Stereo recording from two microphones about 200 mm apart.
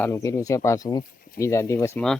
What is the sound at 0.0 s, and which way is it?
Speech, 15° left (ahead or behind).